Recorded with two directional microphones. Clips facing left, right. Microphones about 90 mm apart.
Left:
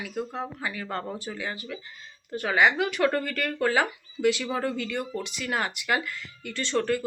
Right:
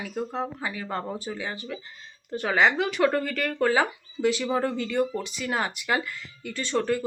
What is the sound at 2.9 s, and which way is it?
Speech, 15° right (ahead or behind).